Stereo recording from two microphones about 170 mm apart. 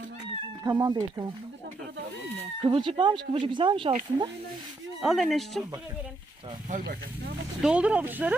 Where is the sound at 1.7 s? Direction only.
90° right.